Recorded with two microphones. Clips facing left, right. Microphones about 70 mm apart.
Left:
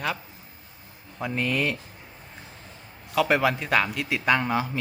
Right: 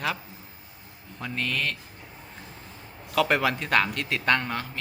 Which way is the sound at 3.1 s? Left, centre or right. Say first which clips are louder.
Left 1 dB; centre.